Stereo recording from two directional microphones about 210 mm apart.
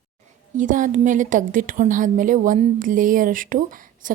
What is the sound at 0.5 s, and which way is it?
A woman's voice, 40° right (ahead or behind).